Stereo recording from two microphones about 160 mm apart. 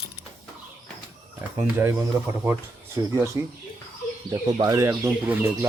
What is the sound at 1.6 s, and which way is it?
Speech, 15° right (ahead or behind).